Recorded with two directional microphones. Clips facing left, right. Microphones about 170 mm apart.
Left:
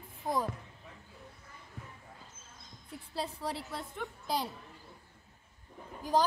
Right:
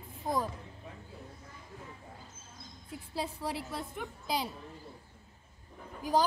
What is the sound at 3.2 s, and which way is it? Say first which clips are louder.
A woman's voice: right 1 dB; 5° right (ahead or behind).